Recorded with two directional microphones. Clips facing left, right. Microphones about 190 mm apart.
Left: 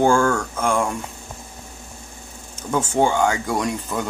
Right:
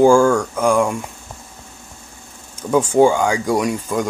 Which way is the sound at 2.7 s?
10° right (ahead or behind).